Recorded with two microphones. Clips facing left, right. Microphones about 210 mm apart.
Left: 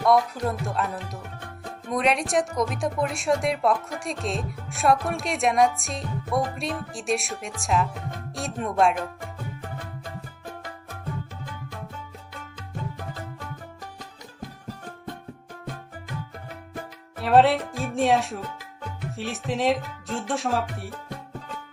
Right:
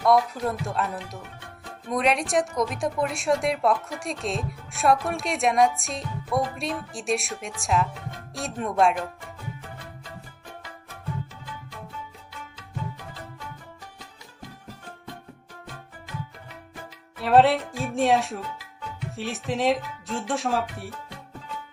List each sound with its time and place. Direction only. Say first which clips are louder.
0.0 s a woman's voice: even; centre (ahead or behind)
9.6 s music: left 5 dB; 50° left (ahead or behind)
17.2 s a woman's voice: even; centre (ahead or behind)